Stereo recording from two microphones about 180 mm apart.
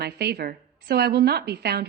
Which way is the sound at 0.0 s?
65° right (ahead or behind).